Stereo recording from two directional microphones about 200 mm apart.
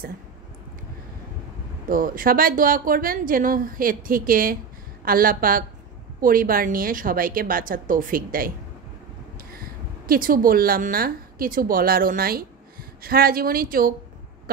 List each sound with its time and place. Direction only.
1.9 s a woman's voice: 45° right (ahead or behind)